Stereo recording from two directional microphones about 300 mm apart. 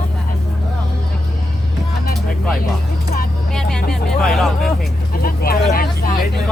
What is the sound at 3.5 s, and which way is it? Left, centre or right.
Vehicle, centre.